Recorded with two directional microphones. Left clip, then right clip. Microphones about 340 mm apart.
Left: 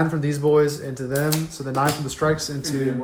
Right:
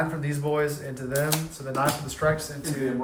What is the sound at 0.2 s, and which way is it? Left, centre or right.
Speech, centre.